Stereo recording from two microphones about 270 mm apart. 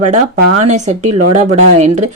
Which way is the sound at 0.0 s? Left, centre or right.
Right.